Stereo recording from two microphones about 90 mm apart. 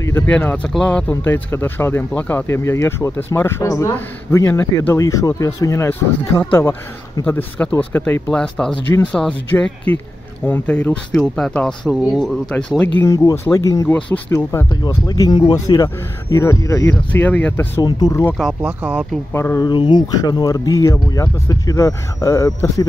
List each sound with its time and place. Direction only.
0.3 s speech: 15° left (ahead or behind)
1.2 s speech: 25° left (ahead or behind)
2.4 s speech: 30° left (ahead or behind)
5.9 s speech: 25° left (ahead or behind)
8.3 s speech: 5° left (ahead or behind)
9.5 s speech: 20° left (ahead or behind)
11.9 s speech: 5° right (ahead or behind)
13.0 s speech: 35° left (ahead or behind)
14.7 s speech: 50° left (ahead or behind)
17.1 s speech: 20° left (ahead or behind)
17.8 s speech: 50° left (ahead or behind)
18.4 s speech: 10° right (ahead or behind)
19.3 s speech: 30° left (ahead or behind)
19.6 s speech: 55° left (ahead or behind); by 22.8 s 35° left (ahead or behind)